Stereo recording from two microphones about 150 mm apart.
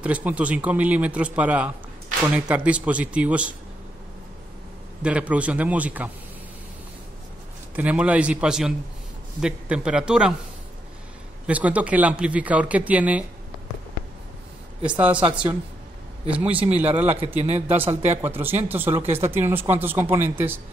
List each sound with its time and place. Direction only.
0.0 s speech: 10° right (ahead or behind)
5.0 s speech: 10° right (ahead or behind)
7.7 s a man's voice: 10° right (ahead or behind)
11.4 s speech: 10° right (ahead or behind)
14.9 s speech: 10° right (ahead or behind)
16.5 s speech: 45° right (ahead or behind)
17.6 s speech: 15° right (ahead or behind)
17.8 s speech: 45° right (ahead or behind)
18.2 s speech: 15° right (ahead or behind)